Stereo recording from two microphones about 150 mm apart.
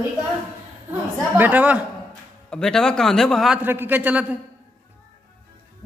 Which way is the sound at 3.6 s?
15° right (ahead or behind).